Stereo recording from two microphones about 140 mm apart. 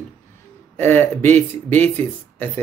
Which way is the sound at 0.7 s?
15° left (ahead or behind).